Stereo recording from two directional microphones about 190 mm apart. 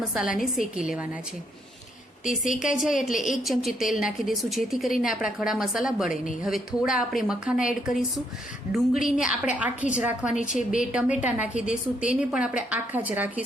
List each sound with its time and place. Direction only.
0.1 s a woman's voice: centre (ahead or behind)
2.4 s a woman's voice: 40° left (ahead or behind)
2.7 s a woman's voice: centre (ahead or behind)
10.3 s a woman's voice: 40° left (ahead or behind)
10.7 s a woman's voice: 5° right (ahead or behind)